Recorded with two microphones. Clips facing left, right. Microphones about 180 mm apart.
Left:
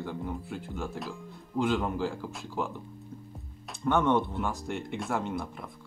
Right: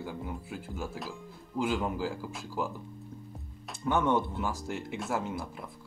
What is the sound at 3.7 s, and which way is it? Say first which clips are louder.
Speech: left 2 dB; 5° right (ahead or behind).